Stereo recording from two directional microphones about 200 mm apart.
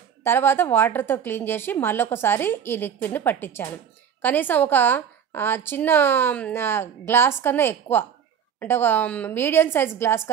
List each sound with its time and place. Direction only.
0.2 s a woman's voice: 10° left (ahead or behind)